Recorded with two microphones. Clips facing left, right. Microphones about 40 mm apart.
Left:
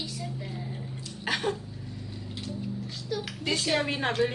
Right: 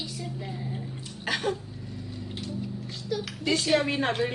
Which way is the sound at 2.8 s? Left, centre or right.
Centre.